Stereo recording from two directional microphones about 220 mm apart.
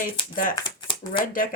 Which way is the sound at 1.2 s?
40° left (ahead or behind).